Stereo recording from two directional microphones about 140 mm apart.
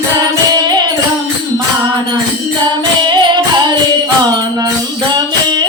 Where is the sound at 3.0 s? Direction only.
35° right (ahead or behind).